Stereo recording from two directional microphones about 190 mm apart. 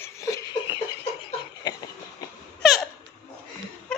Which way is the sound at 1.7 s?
20° left (ahead or behind).